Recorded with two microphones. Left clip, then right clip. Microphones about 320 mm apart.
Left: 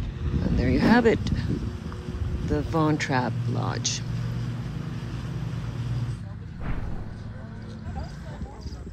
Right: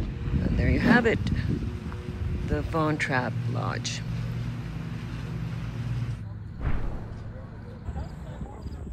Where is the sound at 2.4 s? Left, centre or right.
Centre.